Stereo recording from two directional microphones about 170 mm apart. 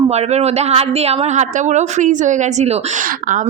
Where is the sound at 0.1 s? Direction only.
40° right (ahead or behind).